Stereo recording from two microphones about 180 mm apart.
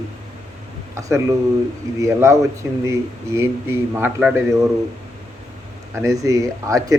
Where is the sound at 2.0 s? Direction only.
15° right (ahead or behind).